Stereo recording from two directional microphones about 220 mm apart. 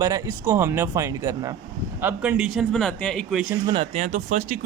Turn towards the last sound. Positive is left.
turn(degrees=-35)  # may be behind; listen again after turning